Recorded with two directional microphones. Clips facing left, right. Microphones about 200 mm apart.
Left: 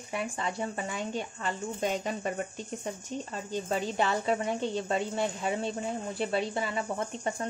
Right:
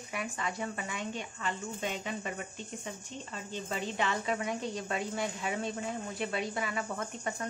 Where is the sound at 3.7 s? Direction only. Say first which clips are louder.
Left 4 dB; 35° left (ahead or behind).